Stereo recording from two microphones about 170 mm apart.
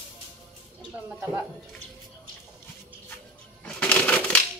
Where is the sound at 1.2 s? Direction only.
10° right (ahead or behind).